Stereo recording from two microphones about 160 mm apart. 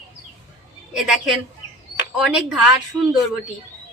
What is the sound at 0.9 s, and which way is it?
Speech, 5° right (ahead or behind).